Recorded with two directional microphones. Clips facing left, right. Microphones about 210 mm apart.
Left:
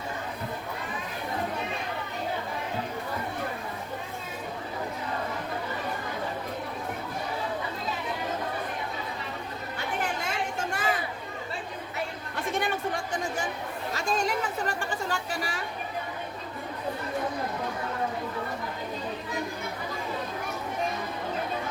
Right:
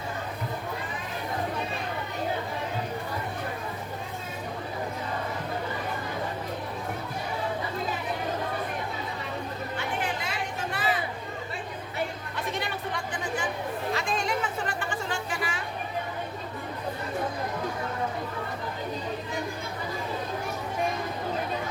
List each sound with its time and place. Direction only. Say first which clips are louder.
9.7 s chatter: left 1 dB; 45° left (ahead or behind)
12.5 s chatter: left 4 dB; 50° left (ahead or behind)
13.9 s a sound: left 3 dB; 40° left (ahead or behind)